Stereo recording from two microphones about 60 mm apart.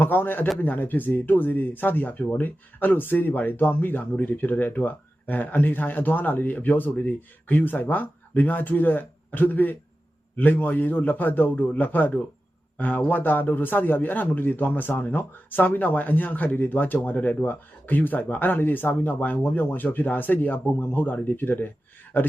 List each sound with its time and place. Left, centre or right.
0.0 s speech: left